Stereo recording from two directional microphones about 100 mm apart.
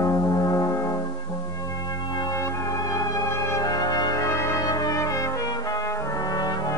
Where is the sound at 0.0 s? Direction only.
35° left (ahead or behind).